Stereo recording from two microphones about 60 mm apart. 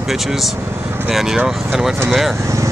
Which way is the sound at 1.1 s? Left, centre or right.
Centre.